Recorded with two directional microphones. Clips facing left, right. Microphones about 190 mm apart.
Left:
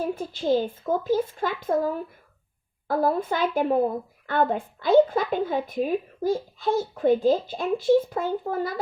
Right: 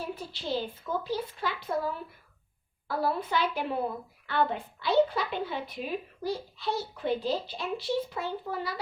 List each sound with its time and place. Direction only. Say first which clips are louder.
0.0 s a woman's voice: left 9 dB; 45° left (ahead or behind)